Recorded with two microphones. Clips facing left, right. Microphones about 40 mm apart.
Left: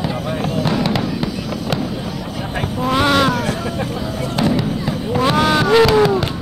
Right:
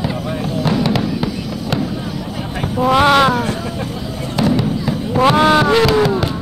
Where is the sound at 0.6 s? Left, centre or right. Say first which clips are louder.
Right 3 dB; centre.